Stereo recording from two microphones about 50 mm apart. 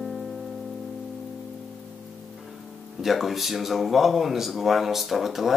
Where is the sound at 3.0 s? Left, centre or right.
Centre.